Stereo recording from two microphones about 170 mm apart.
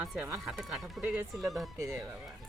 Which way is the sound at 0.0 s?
5° right (ahead or behind).